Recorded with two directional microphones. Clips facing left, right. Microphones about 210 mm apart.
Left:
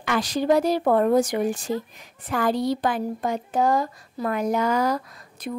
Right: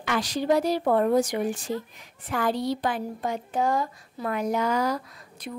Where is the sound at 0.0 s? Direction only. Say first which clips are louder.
Left 3 dB; 50° left (ahead or behind).